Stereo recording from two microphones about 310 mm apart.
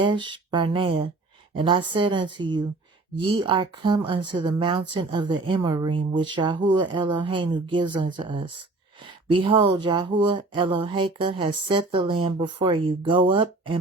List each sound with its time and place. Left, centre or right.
0.0 s speech: centre